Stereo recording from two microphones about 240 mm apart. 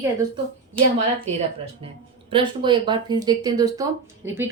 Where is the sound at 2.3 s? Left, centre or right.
Centre.